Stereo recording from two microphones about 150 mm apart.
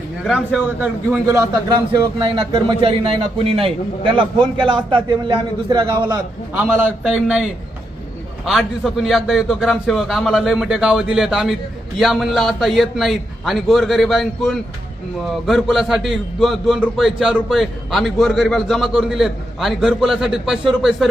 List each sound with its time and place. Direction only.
0.3 s a man's voice: centre (ahead or behind)
1.3 s speech: 25° right (ahead or behind)
6.6 s a man's voice: 15° right (ahead or behind)
8.4 s a man's voice: centre (ahead or behind)